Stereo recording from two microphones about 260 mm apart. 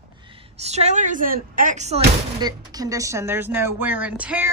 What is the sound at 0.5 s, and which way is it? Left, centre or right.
Speech, right.